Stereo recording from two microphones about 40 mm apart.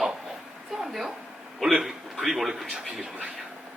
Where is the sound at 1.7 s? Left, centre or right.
Centre.